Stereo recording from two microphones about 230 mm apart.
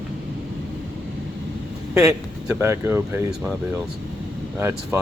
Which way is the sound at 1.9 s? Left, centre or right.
Centre.